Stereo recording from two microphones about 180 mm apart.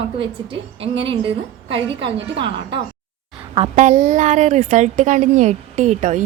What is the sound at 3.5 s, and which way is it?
A woman's voice, 40° right (ahead or behind).